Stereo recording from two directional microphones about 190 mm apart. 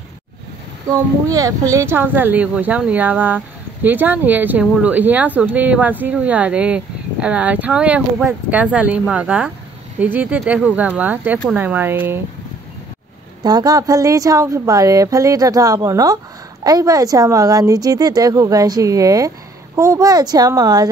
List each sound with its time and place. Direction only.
0.9 s speech: 15° right (ahead or behind)
13.4 s speech: 20° right (ahead or behind)